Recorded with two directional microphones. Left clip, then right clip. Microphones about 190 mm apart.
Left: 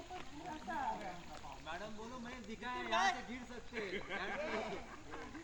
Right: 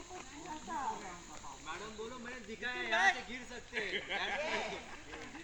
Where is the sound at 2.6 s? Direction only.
70° left (ahead or behind).